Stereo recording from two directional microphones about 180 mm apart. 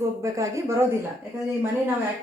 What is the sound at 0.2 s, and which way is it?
Speech, 15° right (ahead or behind).